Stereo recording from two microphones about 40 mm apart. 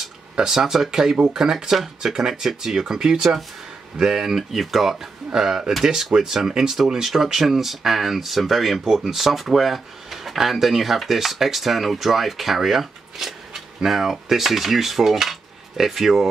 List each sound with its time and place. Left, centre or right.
0.6 s speech: centre